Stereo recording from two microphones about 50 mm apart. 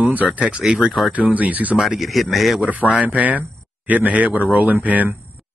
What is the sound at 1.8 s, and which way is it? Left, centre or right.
Speech, centre.